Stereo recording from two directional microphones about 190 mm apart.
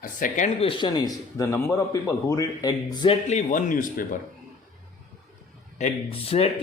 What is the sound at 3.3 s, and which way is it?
Speech, 40° left (ahead or behind).